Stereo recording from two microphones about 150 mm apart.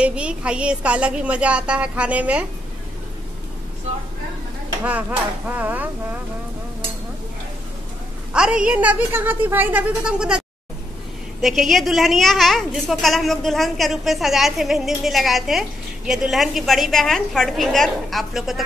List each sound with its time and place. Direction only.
0.0 s a woman's voice: 5° right (ahead or behind)
5.5 s a woman's voice: 10° right (ahead or behind)
8.3 s a woman's voice: 5° right (ahead or behind)
11.4 s a woman's voice: centre (ahead or behind)